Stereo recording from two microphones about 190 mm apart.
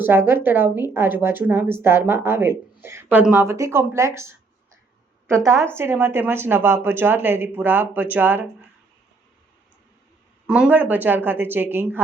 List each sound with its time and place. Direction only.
0.0 s a woman's voice: 10° right (ahead or behind)
10.4 s a woman's voice: 5° right (ahead or behind)